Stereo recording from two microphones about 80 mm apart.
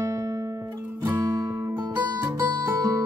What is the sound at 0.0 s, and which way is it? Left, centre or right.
Music, right.